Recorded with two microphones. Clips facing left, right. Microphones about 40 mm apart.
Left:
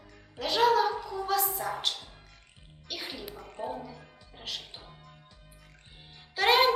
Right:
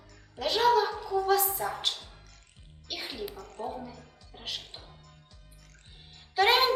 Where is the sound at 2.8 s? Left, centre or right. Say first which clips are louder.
Right 2 dB; centre.